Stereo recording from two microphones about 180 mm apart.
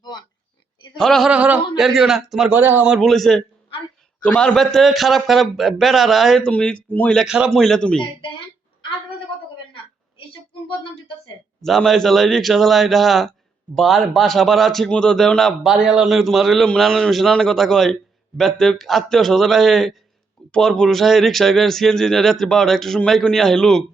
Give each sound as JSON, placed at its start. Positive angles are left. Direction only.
{"t": 0.0, "sound": "oink", "side_deg": 25}
{"t": 0.9, "sound": "speech", "side_deg": 0}
{"t": 11.6, "sound": "speech", "side_deg": 0}